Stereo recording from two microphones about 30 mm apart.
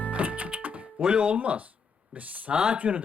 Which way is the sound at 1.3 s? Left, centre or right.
Right.